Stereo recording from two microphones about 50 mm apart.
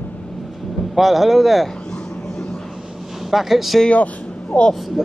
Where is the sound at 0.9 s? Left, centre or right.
Centre.